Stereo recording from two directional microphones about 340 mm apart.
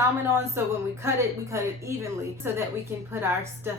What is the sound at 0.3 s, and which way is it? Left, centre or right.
Speech, centre.